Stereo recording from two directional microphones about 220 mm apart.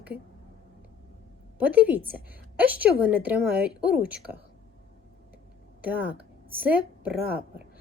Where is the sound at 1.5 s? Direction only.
5° right (ahead or behind).